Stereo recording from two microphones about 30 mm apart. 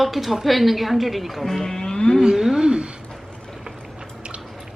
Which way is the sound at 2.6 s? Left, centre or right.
Right.